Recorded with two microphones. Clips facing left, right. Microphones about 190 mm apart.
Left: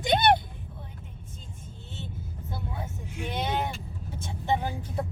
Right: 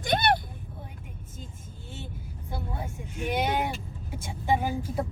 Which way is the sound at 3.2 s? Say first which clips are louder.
Right 3 dB; 10° right (ahead or behind).